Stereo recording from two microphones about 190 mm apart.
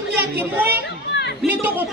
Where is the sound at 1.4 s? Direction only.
10° right (ahead or behind).